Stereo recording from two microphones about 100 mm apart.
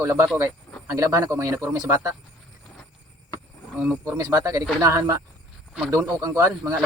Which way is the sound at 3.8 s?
10° right (ahead or behind).